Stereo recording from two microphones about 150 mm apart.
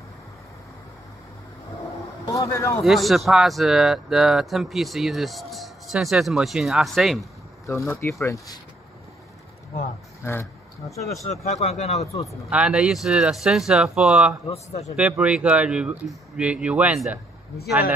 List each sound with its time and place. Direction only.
2.3 s speech: 20° left (ahead or behind)
2.8 s speech: centre (ahead or behind)
7.6 s speech: 20° left (ahead or behind)
10.2 s speech: 15° left (ahead or behind)
11.4 s speech: 50° left (ahead or behind)
12.3 s speech: 5° right (ahead or behind)
14.5 s speech: 45° left (ahead or behind)
15.0 s speech: 5° right (ahead or behind)